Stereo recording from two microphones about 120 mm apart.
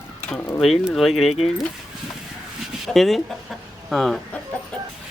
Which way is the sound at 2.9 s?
Centre (ahead or behind).